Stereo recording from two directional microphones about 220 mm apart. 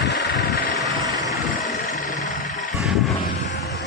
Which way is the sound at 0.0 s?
50° left (ahead or behind).